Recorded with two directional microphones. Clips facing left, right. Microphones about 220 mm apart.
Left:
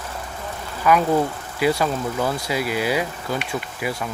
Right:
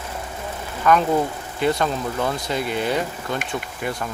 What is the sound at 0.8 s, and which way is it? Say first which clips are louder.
Speech: even; 5° left (ahead or behind).